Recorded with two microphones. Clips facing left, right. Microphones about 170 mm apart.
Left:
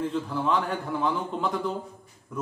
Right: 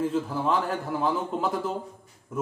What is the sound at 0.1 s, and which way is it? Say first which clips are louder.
A man's voice: right 1 dB; 5° right (ahead or behind).